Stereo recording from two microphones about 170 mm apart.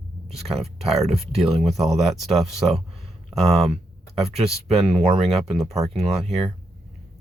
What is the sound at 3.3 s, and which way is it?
Speech, 35° right (ahead or behind).